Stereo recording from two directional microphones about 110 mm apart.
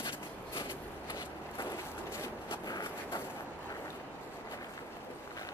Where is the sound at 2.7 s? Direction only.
35° left (ahead or behind).